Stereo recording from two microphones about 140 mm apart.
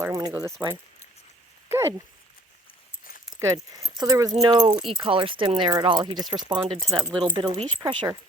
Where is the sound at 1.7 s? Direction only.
20° right (ahead or behind).